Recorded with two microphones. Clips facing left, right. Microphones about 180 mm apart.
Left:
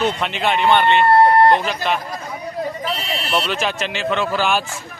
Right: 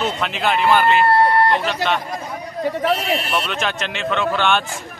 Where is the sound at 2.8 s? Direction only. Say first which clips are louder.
Right 6 dB; 50° right (ahead or behind).